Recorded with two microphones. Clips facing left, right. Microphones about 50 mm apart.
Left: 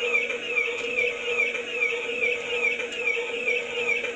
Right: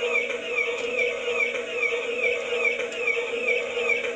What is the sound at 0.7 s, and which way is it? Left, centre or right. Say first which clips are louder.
Music: right 1 dB; left.